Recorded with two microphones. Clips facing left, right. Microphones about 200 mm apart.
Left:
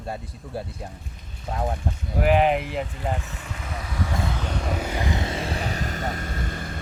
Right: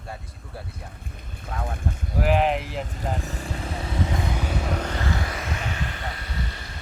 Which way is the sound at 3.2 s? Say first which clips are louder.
Right 5 dB; 35° right (ahead or behind).